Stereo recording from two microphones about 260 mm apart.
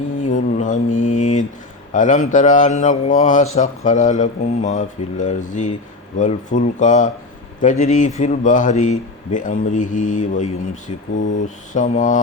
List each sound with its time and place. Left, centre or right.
0.2 s mantra: left
1.9 s speech: left